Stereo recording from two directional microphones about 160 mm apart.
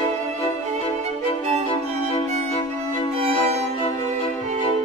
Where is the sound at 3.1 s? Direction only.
40° right (ahead or behind).